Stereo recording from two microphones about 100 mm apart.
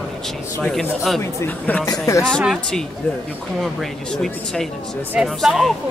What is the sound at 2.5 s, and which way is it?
Speech, 5° left (ahead or behind).